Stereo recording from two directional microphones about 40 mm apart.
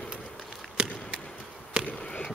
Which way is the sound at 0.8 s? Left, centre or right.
Right.